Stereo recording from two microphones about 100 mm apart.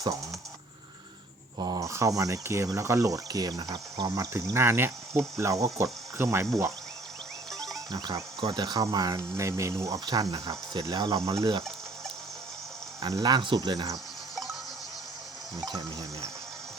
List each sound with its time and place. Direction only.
1.5 s speech: 40° right (ahead or behind)
7.9 s speech: 40° right (ahead or behind)
13.0 s speech: 45° right (ahead or behind)
15.6 s speech: 40° right (ahead or behind)